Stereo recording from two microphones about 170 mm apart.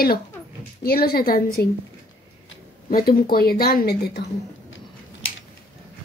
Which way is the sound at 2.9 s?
60° left (ahead or behind).